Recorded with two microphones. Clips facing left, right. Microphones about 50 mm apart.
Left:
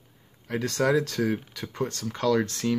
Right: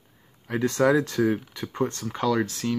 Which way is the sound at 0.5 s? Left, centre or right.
Right.